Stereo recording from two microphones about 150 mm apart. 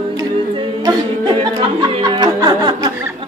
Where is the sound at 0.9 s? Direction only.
30° right (ahead or behind).